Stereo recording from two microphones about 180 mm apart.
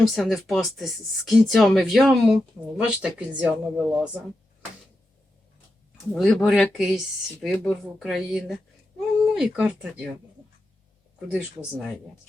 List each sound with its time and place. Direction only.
0.0 s speech: centre (ahead or behind)
6.1 s speech: centre (ahead or behind)
11.3 s speech: 5° right (ahead or behind)